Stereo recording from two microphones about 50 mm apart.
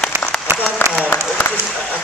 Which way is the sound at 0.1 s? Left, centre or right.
Right.